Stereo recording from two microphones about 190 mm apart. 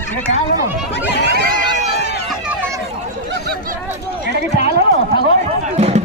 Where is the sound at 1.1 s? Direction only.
65° left (ahead or behind).